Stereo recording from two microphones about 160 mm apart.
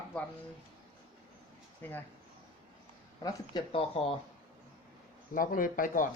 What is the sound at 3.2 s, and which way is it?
Speech, 25° left (ahead or behind).